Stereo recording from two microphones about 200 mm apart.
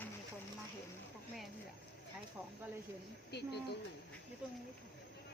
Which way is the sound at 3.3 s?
55° left (ahead or behind).